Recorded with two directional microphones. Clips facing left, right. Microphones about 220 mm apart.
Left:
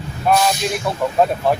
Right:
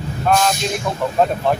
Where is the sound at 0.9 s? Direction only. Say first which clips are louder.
Left 1 dB; 10° left (ahead or behind).